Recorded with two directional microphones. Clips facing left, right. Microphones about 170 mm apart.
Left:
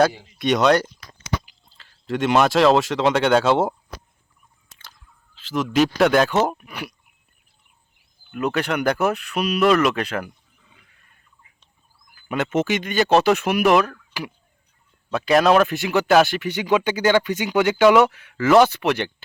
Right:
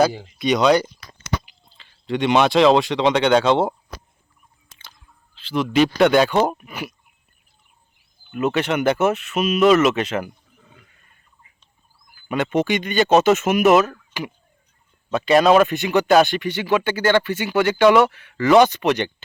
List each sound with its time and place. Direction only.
0.3 s speech: centre (ahead or behind)
4.7 s a sound: centre (ahead or behind)
6.0 s speech: centre (ahead or behind)
8.3 s speech: centre (ahead or behind)
10.6 s wild animals: 50° right (ahead or behind)
12.3 s speech: 5° left (ahead or behind)
15.1 s speech: centre (ahead or behind)